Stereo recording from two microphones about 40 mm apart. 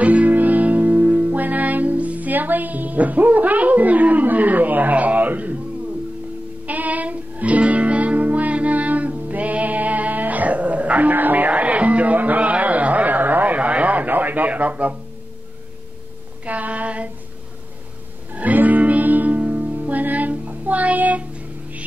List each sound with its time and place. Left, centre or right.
0.0 s music: right
6.6 s music: right
16.4 s female singing: right
18.3 s music: right